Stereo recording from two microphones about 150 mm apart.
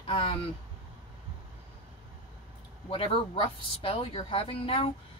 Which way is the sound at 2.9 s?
35° left (ahead or behind).